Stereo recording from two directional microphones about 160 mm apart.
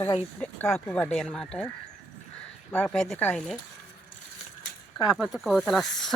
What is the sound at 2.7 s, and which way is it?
Speech, 5° left (ahead or behind).